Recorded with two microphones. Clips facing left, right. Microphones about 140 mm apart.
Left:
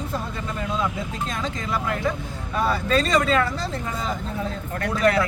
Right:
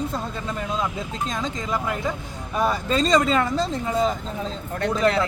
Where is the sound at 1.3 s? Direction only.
15° right (ahead or behind).